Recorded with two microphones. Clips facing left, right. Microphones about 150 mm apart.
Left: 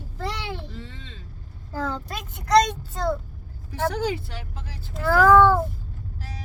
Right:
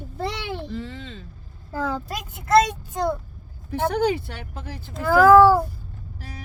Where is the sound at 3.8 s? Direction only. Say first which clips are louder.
Right 4 dB; 60° right (ahead or behind).